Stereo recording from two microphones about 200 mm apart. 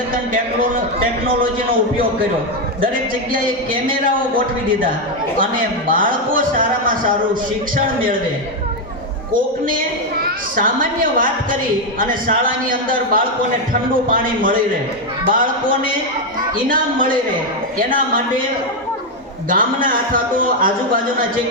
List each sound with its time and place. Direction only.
2.8 s a man's voice: 45° right (ahead or behind)
5.4 s a man's voice: 45° right (ahead or behind)
9.3 s a man's voice: 45° right (ahead or behind)
14.1 s a man's voice: 45° right (ahead or behind)
19.5 s a man's voice: 45° right (ahead or behind)